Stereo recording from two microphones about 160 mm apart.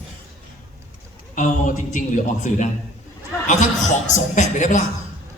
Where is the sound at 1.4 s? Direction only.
50° left (ahead or behind).